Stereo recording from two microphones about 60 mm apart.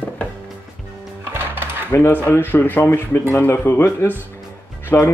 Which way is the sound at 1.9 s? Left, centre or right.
Left.